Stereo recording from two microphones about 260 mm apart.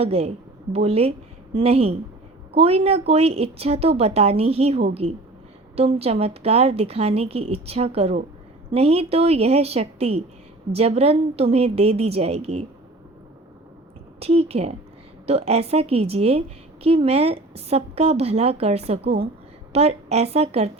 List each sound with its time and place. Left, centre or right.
0.0 s a woman's voice: right
14.2 s a woman's voice: right